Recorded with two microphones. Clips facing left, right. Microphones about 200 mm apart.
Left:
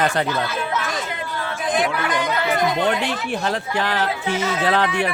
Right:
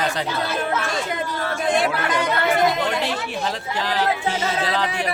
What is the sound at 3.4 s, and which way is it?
Speech, 60° left (ahead or behind).